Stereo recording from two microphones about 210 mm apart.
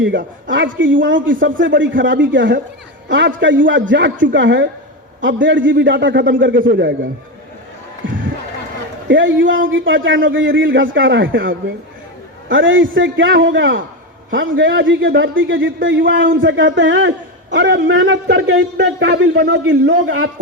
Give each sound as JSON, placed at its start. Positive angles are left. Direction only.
{"t": 0.0, "sound": "a man's voice", "side_deg": -60}
{"t": 9.0, "sound": "a man's voice", "side_deg": -60}
{"t": 12.5, "sound": "a man's voice", "side_deg": -65}